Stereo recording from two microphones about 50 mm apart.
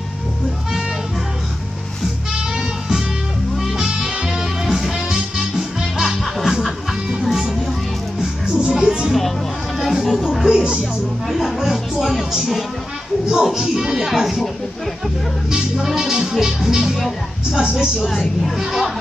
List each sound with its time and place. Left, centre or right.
3.5 s music: centre
8.7 s music: centre
9.8 s music: centre
13.3 s speech: centre
15.5 s speech: centre
17.5 s speech: centre
17.7 s a woman's voice: centre